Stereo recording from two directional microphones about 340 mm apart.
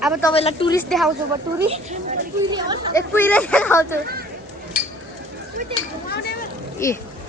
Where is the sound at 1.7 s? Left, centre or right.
Centre.